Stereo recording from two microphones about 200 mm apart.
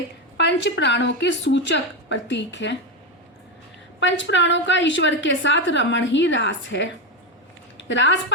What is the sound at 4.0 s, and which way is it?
A woman's voice, 65° left (ahead or behind).